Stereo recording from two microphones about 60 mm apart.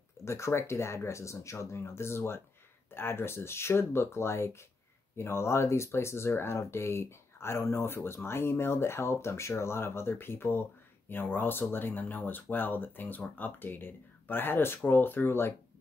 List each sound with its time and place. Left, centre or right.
0.2 s speech: left